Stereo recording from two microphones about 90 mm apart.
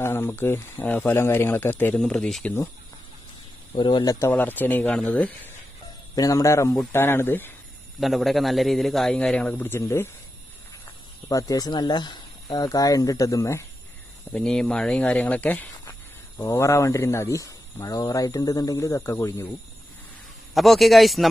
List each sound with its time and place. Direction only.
0.0 s speech: 25° left (ahead or behind)
2.0 s speech: 10° left (ahead or behind)
3.7 s speech: 60° left (ahead or behind)
4.0 s a man's voice: 40° left (ahead or behind)
4.3 s speech: 20° left (ahead or behind)
6.1 s a man's voice: 40° left (ahead or behind); by 7.5 s 25° left (ahead or behind)
8.0 s a man's voice: centre (ahead or behind); by 9.8 s 15° left (ahead or behind)
9.8 s speech: 30° left (ahead or behind)
11.2 s speech: 40° left (ahead or behind)
14.3 s speech: 5° left (ahead or behind)
15.8 s speech: 30° left (ahead or behind)
20.5 s a man's voice: centre (ahead or behind)